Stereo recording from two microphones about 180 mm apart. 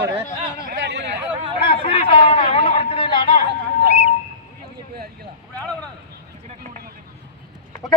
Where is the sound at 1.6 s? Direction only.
30° left (ahead or behind).